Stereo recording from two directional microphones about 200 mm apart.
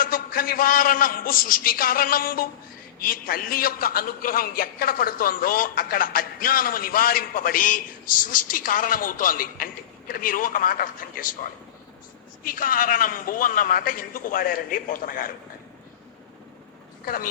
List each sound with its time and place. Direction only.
0.0 s a man's voice: 45° left (ahead or behind)
12.4 s a man's voice: 45° left (ahead or behind)
17.1 s a man's voice: 40° left (ahead or behind)